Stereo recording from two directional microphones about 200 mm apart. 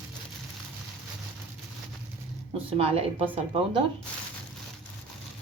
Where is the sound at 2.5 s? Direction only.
30° right (ahead or behind).